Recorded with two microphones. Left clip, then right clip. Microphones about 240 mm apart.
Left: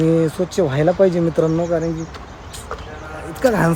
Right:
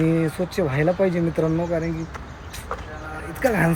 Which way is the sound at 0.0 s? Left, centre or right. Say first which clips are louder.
Left 5 dB; centre.